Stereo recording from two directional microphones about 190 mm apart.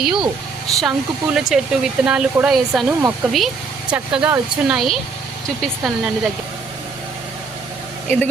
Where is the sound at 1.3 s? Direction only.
Centre (ahead or behind).